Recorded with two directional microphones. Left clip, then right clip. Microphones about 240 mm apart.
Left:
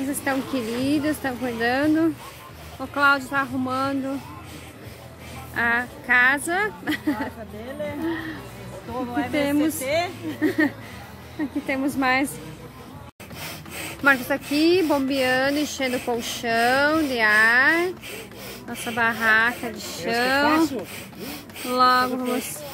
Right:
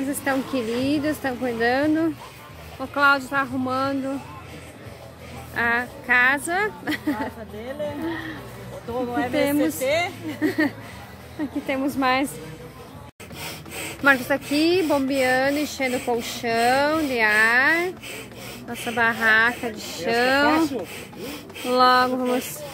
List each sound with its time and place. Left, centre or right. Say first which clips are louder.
0.1 s speech: right 1 dB; centre
5.5 s speech: even; centre
9.3 s speech: even; centre
9.8 s speech: right 1 dB; right
10.6 s speech: left 1 dB; centre
13.7 s speech: right 1 dB; centre
21.2 s a sound: right 2 dB; centre
21.7 s speech: right 1 dB; centre